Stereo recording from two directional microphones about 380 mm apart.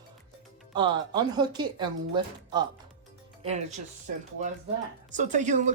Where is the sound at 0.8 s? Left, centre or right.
Centre.